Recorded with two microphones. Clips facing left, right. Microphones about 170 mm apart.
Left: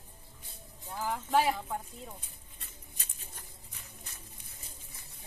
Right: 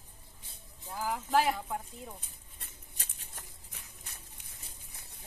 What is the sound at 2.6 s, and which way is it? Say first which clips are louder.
Patter: right 1 dB; 60° right (ahead or behind).